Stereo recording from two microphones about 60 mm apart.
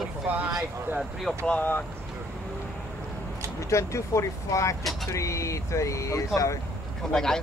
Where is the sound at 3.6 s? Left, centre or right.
Left.